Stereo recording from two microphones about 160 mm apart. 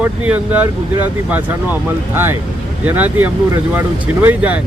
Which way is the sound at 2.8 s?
10° right (ahead or behind).